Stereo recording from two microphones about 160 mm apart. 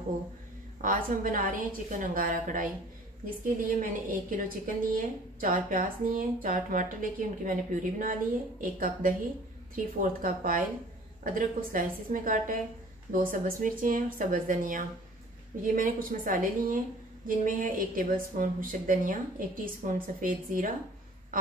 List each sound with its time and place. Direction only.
0.7 s a woman's voice: 60° right (ahead or behind)